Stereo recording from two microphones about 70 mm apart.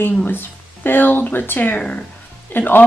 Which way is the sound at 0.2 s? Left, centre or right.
Left.